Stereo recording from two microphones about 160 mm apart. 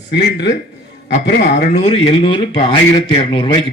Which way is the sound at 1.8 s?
40° left (ahead or behind).